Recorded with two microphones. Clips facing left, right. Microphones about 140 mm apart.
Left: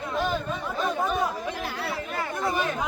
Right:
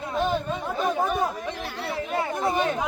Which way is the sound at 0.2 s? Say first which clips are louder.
Right 3 dB; 20° right (ahead or behind).